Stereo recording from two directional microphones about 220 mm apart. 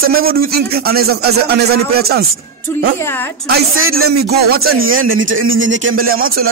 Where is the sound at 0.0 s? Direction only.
45° right (ahead or behind).